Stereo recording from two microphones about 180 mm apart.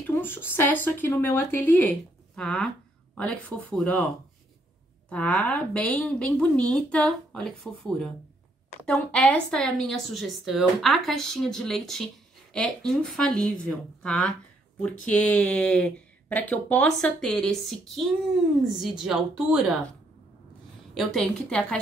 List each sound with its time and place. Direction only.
0.0 s speech: 10° left (ahead or behind)
5.1 s speech: 5° left (ahead or behind)
20.9 s speech: centre (ahead or behind)